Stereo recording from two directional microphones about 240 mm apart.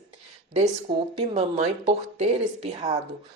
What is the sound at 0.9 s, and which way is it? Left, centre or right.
Speech, centre.